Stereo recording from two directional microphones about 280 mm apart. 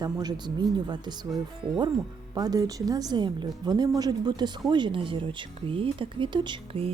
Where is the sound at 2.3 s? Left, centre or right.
Centre.